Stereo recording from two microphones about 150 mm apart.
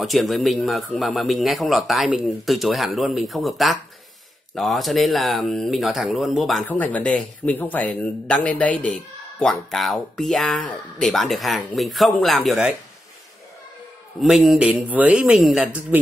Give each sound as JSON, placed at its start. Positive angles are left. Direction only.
{"t": 0.0, "sound": "a man's voice", "side_deg": 0}
{"t": 14.2, "sound": "speech", "side_deg": 0}